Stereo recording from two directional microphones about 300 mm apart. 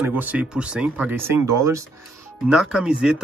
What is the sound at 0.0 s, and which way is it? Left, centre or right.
Speech, centre.